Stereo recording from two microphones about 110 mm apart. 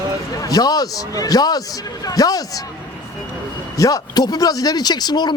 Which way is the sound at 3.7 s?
30° left (ahead or behind).